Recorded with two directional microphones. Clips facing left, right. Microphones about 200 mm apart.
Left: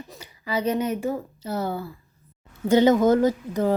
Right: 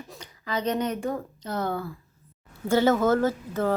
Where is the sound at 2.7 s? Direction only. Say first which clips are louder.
Left 4 dB; 20° left (ahead or behind).